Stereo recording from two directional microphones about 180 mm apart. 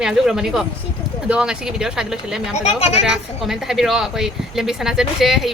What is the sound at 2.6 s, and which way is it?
Speech, 35° left (ahead or behind).